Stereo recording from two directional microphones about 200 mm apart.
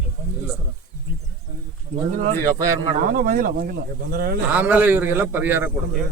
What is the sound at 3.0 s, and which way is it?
Speech, 45° right (ahead or behind).